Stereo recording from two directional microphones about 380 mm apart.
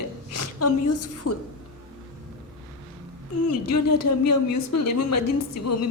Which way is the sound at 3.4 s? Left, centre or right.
Left.